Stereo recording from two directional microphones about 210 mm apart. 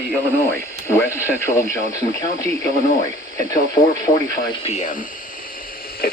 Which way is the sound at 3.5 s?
20° left (ahead or behind).